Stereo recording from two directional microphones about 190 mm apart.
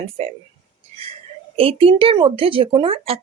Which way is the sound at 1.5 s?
30° right (ahead or behind).